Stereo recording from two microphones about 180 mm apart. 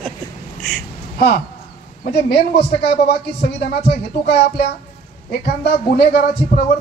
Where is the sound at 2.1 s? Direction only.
65° left (ahead or behind).